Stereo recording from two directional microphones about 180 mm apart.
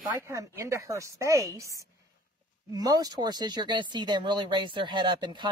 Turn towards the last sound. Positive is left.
turn(degrees=-25)  # may be behind; listen again after turning